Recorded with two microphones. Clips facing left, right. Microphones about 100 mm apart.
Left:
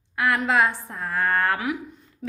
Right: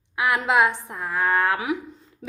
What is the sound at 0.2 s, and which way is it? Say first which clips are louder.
A woman's voice: right 1 dB; 15° right (ahead or behind).